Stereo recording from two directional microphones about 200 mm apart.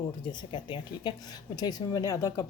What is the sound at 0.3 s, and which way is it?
Speech, 20° left (ahead or behind).